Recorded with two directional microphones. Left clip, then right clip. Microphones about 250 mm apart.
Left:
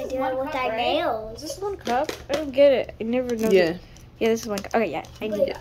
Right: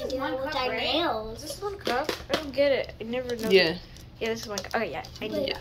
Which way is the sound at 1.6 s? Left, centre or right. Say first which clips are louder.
Left 4 dB; left.